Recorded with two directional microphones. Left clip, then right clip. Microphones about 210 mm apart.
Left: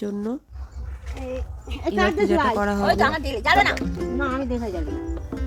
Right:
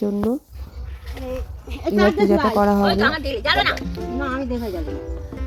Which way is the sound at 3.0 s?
50° left (ahead or behind).